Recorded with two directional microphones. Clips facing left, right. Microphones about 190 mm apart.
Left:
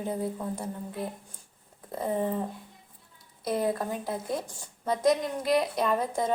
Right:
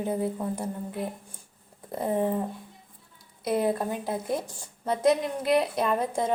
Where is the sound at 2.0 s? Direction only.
15° right (ahead or behind).